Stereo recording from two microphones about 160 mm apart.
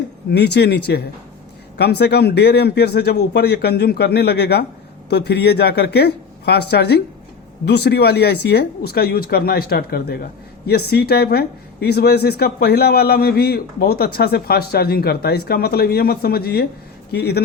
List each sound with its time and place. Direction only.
0.3 s speech: 90° left
17.1 s speech: 90° left